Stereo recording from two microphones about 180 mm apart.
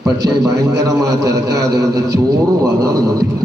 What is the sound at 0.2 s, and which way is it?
A man's voice, 20° right (ahead or behind).